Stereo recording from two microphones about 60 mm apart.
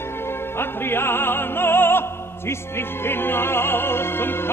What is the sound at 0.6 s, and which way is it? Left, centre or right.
Music, left.